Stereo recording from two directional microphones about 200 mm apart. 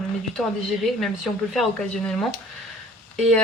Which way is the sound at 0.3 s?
Centre (ahead or behind).